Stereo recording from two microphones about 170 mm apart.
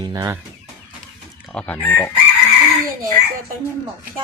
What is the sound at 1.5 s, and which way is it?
Speech, 5° left (ahead or behind).